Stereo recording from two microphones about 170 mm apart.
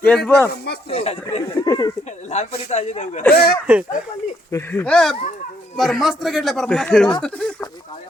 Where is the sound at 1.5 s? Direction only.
20° left (ahead or behind).